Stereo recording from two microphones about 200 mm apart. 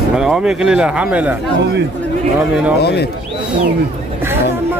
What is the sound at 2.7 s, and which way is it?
Speech, 55° left (ahead or behind).